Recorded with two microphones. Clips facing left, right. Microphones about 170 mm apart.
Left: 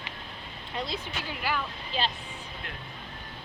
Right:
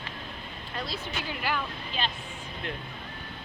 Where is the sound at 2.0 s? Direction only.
30° left (ahead or behind).